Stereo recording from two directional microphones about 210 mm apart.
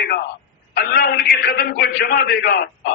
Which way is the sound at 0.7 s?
45° left (ahead or behind).